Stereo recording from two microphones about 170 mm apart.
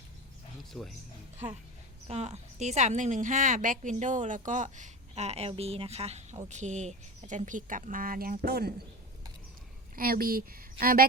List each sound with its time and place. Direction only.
0.7 s speech: centre (ahead or behind)
2.0 s speech: 40° right (ahead or behind); by 8.7 s 65° right (ahead or behind)
9.9 s speech: 60° right (ahead or behind)